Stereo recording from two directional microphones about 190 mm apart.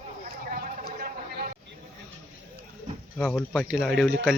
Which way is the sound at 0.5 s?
50° right (ahead or behind).